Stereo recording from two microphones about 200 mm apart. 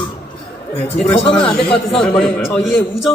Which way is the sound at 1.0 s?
Centre (ahead or behind).